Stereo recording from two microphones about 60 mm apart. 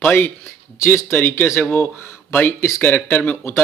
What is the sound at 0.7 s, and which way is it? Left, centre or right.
Speech, left.